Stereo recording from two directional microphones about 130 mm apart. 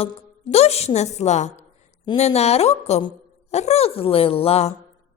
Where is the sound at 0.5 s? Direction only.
55° left (ahead or behind).